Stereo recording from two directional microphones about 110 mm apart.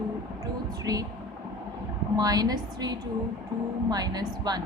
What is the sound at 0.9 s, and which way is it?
Speech, 35° right (ahead or behind).